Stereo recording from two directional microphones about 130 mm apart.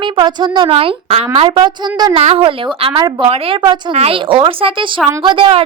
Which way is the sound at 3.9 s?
45° right (ahead or behind).